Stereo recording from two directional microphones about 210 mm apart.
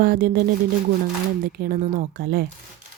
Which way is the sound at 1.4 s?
40° right (ahead or behind).